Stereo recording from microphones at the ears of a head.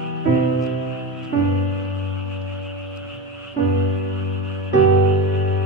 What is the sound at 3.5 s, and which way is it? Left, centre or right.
Music, right.